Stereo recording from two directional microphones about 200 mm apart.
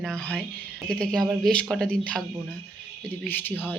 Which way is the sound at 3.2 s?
10° left (ahead or behind).